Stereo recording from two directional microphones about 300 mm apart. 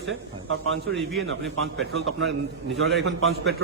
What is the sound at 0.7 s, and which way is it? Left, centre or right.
A man's voice, right.